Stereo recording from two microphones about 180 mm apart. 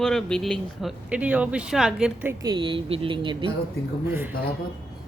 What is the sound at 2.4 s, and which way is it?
Speech, 25° right (ahead or behind).